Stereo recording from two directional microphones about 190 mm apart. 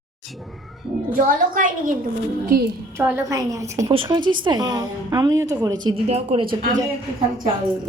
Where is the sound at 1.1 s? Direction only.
45° right (ahead or behind).